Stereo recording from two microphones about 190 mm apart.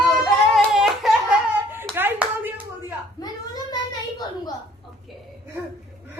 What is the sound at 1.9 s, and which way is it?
Speech, 10° right (ahead or behind).